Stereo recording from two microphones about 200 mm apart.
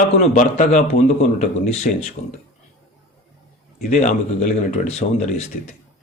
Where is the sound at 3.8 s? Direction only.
40° left (ahead or behind).